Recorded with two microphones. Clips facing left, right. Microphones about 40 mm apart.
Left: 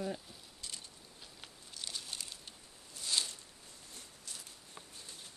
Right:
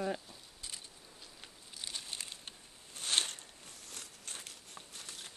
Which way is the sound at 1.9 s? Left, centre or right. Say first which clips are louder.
Right 1 dB; right.